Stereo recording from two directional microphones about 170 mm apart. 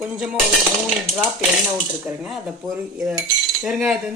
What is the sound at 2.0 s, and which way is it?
Speech, centre (ahead or behind).